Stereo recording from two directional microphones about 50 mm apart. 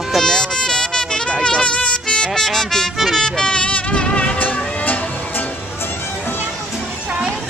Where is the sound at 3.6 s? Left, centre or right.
Left.